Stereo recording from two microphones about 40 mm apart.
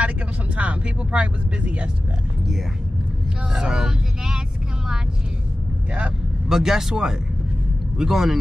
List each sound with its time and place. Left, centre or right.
0.6 s speech: right
3.5 s speech: centre
6.5 s speech: centre